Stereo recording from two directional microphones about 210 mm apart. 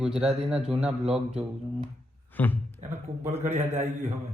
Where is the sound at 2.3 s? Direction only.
10° left (ahead or behind).